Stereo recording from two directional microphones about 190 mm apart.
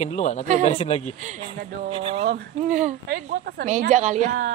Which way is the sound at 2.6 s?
40° right (ahead or behind).